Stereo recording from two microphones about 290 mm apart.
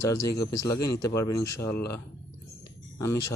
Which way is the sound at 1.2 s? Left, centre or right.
Left.